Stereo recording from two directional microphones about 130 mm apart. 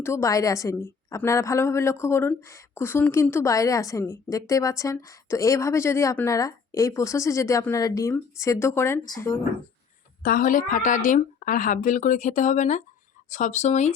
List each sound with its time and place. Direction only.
0.0 s a woman's voice: 20° left (ahead or behind)
10.3 s a woman's voice: 90° left; by 13.9 s 65° left (ahead or behind)